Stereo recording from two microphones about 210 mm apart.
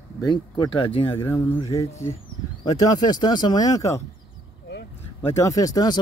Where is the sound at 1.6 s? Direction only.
25° left (ahead or behind).